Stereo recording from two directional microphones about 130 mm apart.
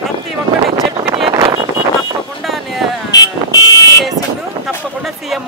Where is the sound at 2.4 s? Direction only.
Centre (ahead or behind).